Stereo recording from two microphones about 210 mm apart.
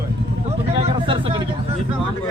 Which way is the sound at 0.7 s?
25° right (ahead or behind).